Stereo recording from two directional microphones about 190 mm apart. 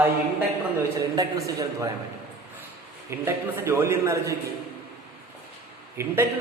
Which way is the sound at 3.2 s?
15° right (ahead or behind).